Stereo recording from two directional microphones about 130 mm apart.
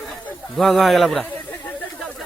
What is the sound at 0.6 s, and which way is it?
Speech, centre (ahead or behind).